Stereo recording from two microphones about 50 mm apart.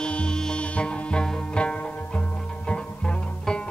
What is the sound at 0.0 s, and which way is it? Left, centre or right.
Music, centre.